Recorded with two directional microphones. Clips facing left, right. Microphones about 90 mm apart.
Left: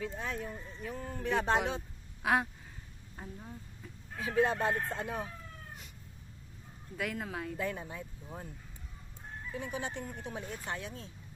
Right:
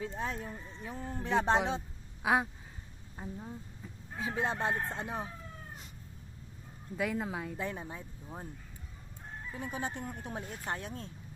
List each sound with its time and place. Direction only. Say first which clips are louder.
0.0 s a man's voice: right 1 dB; 30° right (ahead or behind)
2.2 s speech: right 1 dB; 15° right (ahead or behind)
4.1 s a man's voice: left 4 dB; 20° right (ahead or behind)
6.9 s a man's voice: right 3 dB; 20° right (ahead or behind)
9.6 s speech: even; 40° right (ahead or behind)